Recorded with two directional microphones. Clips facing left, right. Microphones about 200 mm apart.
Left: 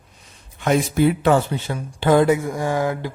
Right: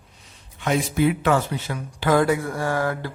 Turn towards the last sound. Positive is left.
turn(degrees=15)  # may be behind; listen again after turning